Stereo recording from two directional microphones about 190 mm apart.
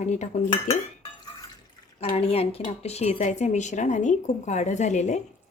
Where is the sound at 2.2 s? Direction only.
30° left (ahead or behind).